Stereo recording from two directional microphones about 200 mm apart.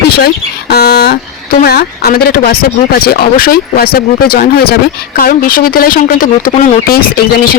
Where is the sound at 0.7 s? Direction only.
55° left (ahead or behind).